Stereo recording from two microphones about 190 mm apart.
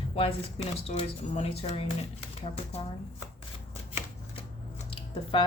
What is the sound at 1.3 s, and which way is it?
Speech, 30° left (ahead or behind).